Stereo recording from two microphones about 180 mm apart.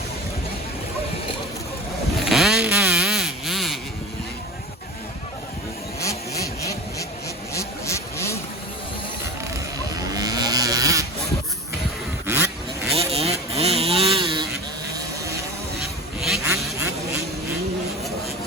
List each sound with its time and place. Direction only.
2.1 s vehicle: centre (ahead or behind)
6.0 s vehicle: 15° left (ahead or behind)
10.1 s sheep: 20° right (ahead or behind)
12.2 s a sound: 10° right (ahead or behind)
13.1 s vehicle: 35° right (ahead or behind)
14.9 s vehicle: 15° right (ahead or behind)